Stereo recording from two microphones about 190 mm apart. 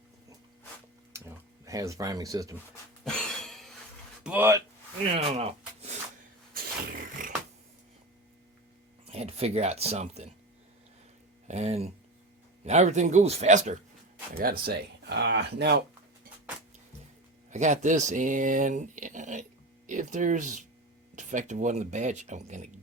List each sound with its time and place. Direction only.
1.6 s speech: 15° right (ahead or behind)
3.0 s a sound: 5° left (ahead or behind)
4.2 s speech: 10° right (ahead or behind)
5.1 s a sound: 30° right (ahead or behind)
7.2 s beatboxing: 45° right (ahead or behind)
9.0 s speech: 30° right (ahead or behind)
11.4 s speech: 35° right (ahead or behind)
14.3 s speech: 55° right (ahead or behind)
17.5 s speech: 40° right (ahead or behind)